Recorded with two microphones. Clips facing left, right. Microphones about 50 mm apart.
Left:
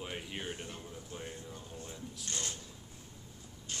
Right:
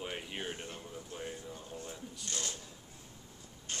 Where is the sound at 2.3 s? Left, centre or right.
Left.